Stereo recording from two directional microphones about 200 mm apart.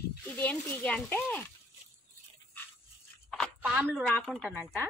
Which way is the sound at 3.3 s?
Centre (ahead or behind).